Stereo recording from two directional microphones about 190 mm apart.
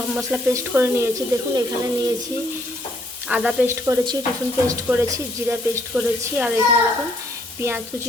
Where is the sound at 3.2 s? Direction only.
5° right (ahead or behind).